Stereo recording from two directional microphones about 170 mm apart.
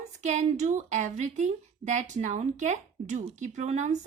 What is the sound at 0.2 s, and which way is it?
A woman's voice, 45° right (ahead or behind).